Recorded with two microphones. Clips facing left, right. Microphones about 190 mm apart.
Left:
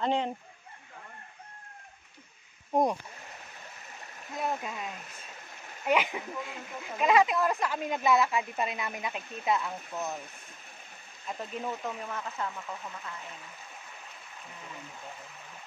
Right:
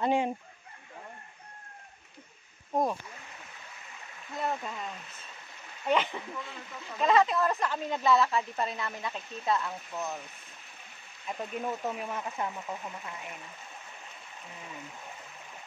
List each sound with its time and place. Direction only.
0.0 s speech: 10° right (ahead or behind)
2.7 s speech: 20° left (ahead or behind)
4.4 s speech: 10° left (ahead or behind)
11.2 s speech: 10° right (ahead or behind)